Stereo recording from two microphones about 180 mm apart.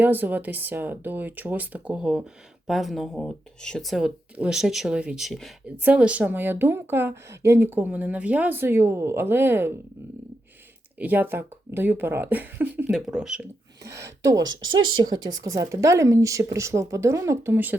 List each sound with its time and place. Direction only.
0.0 s a woman's voice: 10° right (ahead or behind)
11.0 s a woman's voice: 10° right (ahead or behind)
13.8 s speech: 65° right (ahead or behind)
14.2 s a woman's voice: 20° right (ahead or behind)